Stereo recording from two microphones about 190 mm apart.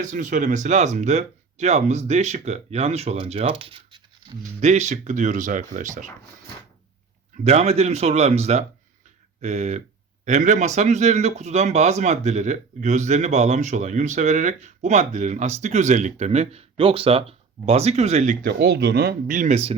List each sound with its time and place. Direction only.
0.0 s a man's voice: 40° right (ahead or behind)
4.7 s a man's voice: 35° right (ahead or behind)
7.4 s a man's voice: 35° right (ahead or behind)
18.4 s speech: 60° right (ahead or behind)
19.4 s a man's voice: 35° right (ahead or behind)